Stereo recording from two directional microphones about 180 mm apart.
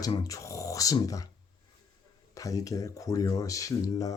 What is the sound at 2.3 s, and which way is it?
Speech, 20° left (ahead or behind).